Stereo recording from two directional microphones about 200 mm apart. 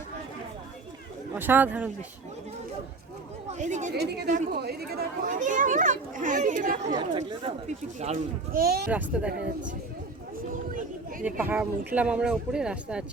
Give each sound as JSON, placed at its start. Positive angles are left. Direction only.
{"t": 1.4, "sound": "speech", "side_deg": -10}
{"t": 3.6, "sound": "speech", "side_deg": -35}
{"t": 6.9, "sound": "speech", "side_deg": -20}
{"t": 7.9, "sound": "speech", "side_deg": -35}
{"t": 8.9, "sound": "speech", "side_deg": -5}
{"t": 9.3, "sound": "speech", "side_deg": -60}
{"t": 11.2, "sound": "speech", "side_deg": -10}